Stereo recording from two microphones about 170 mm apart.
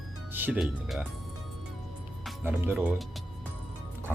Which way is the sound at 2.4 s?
10° right (ahead or behind).